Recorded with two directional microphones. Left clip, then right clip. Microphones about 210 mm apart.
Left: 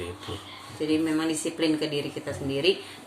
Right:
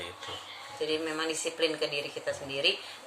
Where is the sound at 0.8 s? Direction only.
10° left (ahead or behind).